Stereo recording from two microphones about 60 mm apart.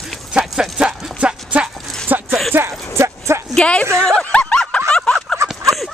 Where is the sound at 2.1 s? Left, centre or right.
Right.